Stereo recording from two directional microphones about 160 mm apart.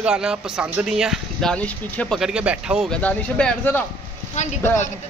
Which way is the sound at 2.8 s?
5° left (ahead or behind).